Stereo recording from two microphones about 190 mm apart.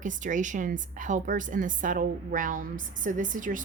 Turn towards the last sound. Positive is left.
turn(degrees=-45)  # may be behind; listen again after turning